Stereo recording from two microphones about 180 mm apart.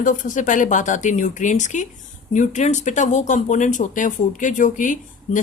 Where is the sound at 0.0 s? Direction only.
45° left (ahead or behind).